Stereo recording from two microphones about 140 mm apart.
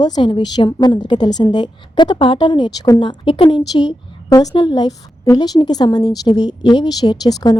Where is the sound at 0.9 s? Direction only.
35° left (ahead or behind).